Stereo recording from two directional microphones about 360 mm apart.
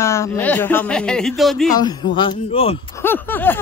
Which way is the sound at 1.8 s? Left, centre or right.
Centre.